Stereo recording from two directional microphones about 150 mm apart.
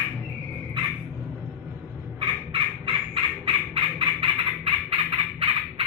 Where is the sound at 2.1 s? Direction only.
35° right (ahead or behind).